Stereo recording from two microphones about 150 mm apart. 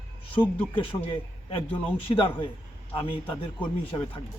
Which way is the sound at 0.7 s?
35° left (ahead or behind).